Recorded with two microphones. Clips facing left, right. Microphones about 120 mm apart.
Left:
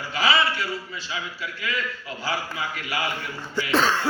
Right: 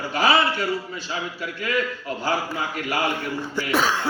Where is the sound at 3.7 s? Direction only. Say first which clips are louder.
Left 1 dB; 10° right (ahead or behind).